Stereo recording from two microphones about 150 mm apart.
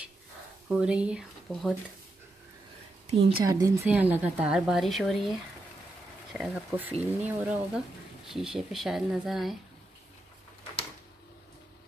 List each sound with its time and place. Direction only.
0.7 s speech: 5° right (ahead or behind)
3.1 s a woman's voice: 40° right (ahead or behind)
3.4 s speech: 20° right (ahead or behind)
3.8 s speech: 10° right (ahead or behind)